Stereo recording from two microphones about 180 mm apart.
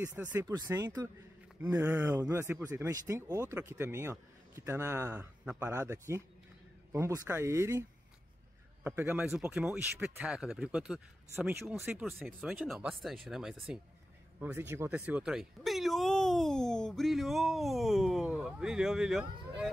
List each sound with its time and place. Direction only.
0.0 s speech: 10° right (ahead or behind)
0.5 s speech: 20° right (ahead or behind)
8.8 s speech: 10° right (ahead or behind)